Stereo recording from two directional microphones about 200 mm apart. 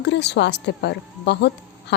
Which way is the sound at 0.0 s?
60° left (ahead or behind).